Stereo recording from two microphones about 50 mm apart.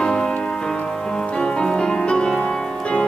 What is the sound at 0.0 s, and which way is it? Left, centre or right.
Music, centre.